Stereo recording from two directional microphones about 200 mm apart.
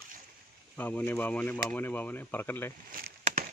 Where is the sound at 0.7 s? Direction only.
10° left (ahead or behind).